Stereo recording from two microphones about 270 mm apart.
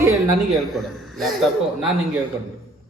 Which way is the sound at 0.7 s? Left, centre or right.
Centre.